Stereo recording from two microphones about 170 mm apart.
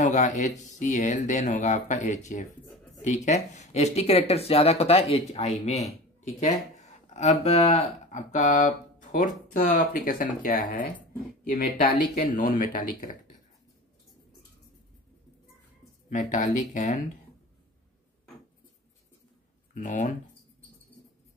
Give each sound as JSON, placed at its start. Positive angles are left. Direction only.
{"t": 0.0, "sound": "speech", "side_deg": 45}
{"t": 16.1, "sound": "speech", "side_deg": 50}
{"t": 19.7, "sound": "speech", "side_deg": 45}